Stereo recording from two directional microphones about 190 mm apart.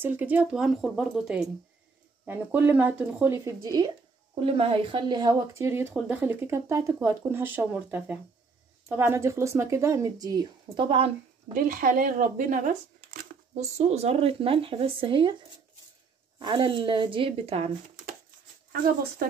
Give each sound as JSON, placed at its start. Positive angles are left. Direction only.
{"t": 0.0, "sound": "a woman's voice", "side_deg": -10}
{"t": 4.4, "sound": "a woman's voice", "side_deg": -30}
{"t": 11.5, "sound": "speech", "side_deg": -45}
{"t": 16.3, "sound": "speech", "side_deg": -25}